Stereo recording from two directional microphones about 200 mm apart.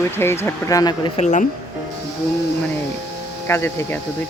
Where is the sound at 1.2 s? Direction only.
35° left (ahead or behind).